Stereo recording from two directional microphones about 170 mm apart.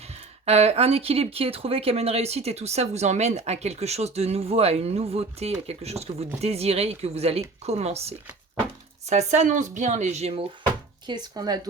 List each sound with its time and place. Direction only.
0.4 s speech: 40° right (ahead or behind)
11.0 s speech: 25° right (ahead or behind)